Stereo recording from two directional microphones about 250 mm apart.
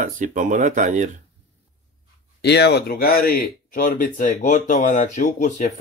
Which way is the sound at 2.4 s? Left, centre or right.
Left.